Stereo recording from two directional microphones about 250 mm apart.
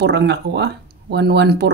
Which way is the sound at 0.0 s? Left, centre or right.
Right.